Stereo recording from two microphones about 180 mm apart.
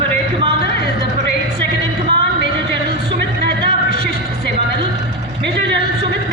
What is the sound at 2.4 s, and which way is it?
Music, 70° right (ahead or behind).